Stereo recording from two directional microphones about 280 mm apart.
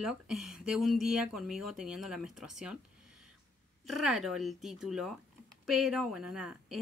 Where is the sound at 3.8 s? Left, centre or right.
Centre.